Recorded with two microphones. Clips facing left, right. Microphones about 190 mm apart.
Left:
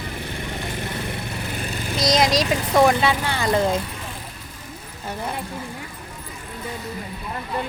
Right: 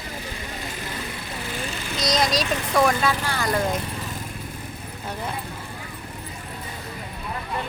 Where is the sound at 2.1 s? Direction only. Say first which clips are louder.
Left 4 dB; 20° left (ahead or behind).